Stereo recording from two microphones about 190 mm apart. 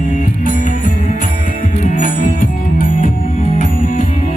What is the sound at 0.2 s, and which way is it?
Music, 45° left (ahead or behind).